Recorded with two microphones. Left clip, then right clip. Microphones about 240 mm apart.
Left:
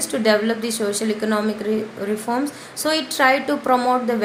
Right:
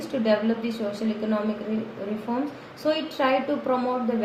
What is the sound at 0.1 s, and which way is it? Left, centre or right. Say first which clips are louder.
Speech: left 6 dB; left.